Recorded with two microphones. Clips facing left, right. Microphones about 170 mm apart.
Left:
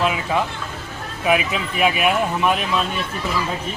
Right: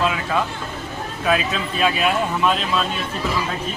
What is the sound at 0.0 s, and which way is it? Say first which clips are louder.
Speech: left 1 dB; 20° left (ahead or behind).